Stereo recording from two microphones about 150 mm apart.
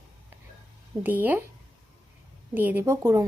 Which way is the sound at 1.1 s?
10° right (ahead or behind).